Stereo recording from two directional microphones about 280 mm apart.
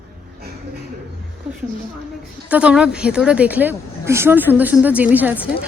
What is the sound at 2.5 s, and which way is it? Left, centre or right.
A woman's voice, centre.